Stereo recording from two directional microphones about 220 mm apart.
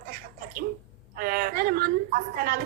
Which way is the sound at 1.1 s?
40° right (ahead or behind).